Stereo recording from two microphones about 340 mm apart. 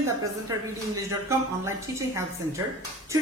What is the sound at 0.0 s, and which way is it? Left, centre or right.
A woman's voice, centre.